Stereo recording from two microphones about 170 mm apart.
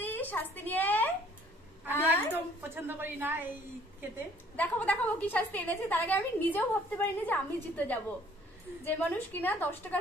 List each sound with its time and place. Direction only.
0.0 s a sound: 10° left (ahead or behind)
1.9 s a woman's voice: 10° left (ahead or behind)
2.3 s speech: 10° right (ahead or behind)
4.6 s a woman's voice: 10° left (ahead or behind)